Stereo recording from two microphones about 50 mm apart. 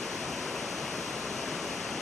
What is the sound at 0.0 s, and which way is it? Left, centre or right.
Waterfall, centre.